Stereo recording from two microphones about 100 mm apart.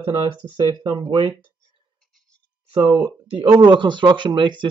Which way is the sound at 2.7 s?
60° right (ahead or behind).